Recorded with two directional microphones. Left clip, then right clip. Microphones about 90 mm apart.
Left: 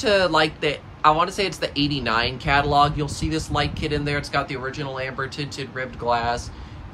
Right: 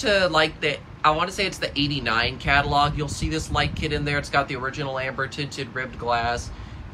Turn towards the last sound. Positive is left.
turn(degrees=25)  # may be behind; listen again after turning